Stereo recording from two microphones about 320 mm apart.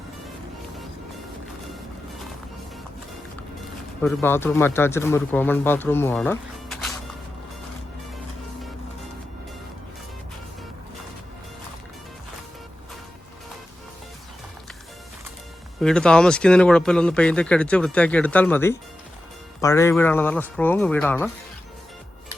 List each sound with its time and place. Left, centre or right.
4.0 s speech: centre
15.8 s a man's voice: centre